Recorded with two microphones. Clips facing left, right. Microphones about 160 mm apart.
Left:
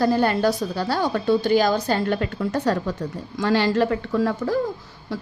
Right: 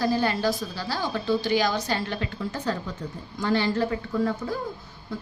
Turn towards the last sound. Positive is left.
turn(degrees=80)